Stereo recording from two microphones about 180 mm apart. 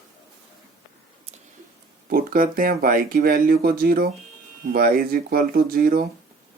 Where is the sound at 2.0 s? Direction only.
55° right (ahead or behind).